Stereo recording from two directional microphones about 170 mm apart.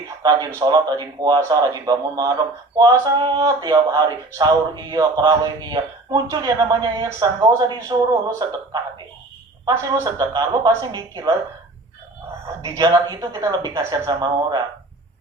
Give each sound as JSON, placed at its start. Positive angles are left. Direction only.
{"t": 0.2, "sound": "speech", "side_deg": -25}
{"t": 9.6, "sound": "speech", "side_deg": -20}
{"t": 12.6, "sound": "speech", "side_deg": -20}